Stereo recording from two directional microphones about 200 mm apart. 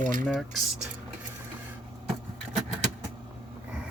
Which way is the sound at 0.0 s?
45° right (ahead or behind).